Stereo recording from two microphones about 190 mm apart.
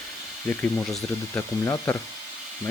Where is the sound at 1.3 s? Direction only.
15° left (ahead or behind).